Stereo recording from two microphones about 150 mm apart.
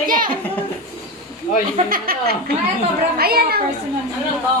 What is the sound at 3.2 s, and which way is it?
Speech, 90° right.